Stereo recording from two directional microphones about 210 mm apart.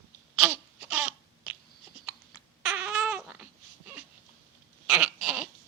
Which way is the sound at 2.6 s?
5° right (ahead or behind).